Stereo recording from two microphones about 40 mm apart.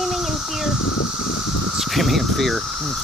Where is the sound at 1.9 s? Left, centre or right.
Centre.